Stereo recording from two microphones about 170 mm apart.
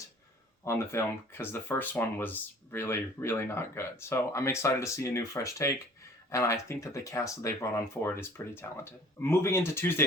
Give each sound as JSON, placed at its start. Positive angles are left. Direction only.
{"t": 0.6, "sound": "speech", "side_deg": 15}